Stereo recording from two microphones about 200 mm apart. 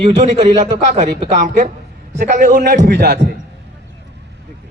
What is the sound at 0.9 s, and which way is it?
Speech, 35° right (ahead or behind).